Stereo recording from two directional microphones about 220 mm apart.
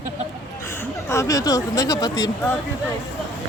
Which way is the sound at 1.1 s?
15° left (ahead or behind).